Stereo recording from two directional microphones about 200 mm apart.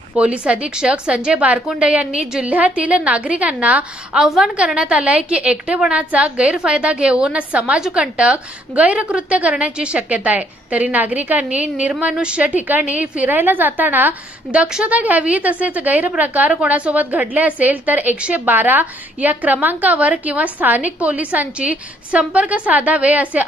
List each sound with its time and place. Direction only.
0.1 s a woman's voice: 5° right (ahead or behind)